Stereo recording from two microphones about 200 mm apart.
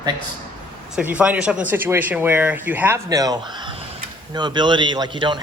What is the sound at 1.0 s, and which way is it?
A man's voice, 5° right (ahead or behind).